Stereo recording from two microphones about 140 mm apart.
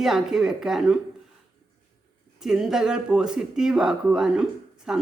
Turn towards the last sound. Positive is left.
turn(degrees=-5)  # may be behind; listen again after turning